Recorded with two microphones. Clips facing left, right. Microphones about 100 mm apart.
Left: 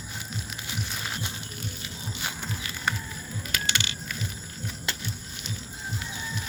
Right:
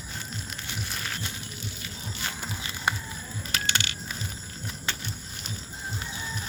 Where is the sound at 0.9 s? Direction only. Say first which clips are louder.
Left 1 dB; 15° left (ahead or behind).